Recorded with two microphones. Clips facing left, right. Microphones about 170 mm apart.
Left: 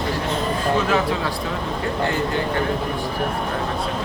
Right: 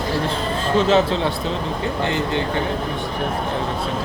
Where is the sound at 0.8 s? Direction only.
25° right (ahead or behind).